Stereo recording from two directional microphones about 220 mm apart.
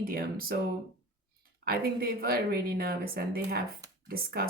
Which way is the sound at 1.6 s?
45° right (ahead or behind).